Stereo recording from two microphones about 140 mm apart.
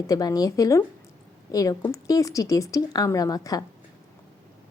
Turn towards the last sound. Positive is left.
turn(degrees=25)  # may be behind; listen again after turning